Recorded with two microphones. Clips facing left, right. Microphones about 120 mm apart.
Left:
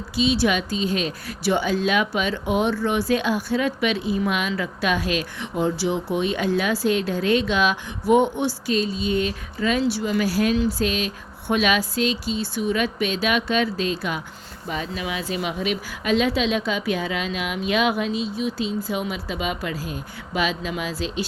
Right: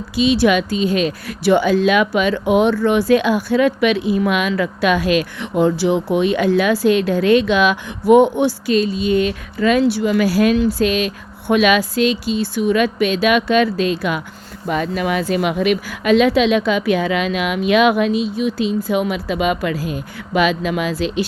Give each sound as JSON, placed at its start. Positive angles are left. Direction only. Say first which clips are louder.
{"t": 0.2, "sound": "speech", "louder": "right 6 dB", "side_deg": -65}
{"t": 14.7, "sound": "speech", "louder": "right 9 dB", "side_deg": -60}